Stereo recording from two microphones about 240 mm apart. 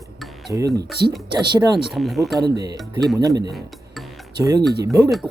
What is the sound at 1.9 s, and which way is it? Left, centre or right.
Speech, centre.